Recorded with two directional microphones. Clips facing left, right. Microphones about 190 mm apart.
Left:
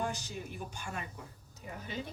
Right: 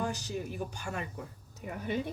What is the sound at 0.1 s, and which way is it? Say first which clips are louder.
Speech: right 5 dB; 40° right (ahead or behind).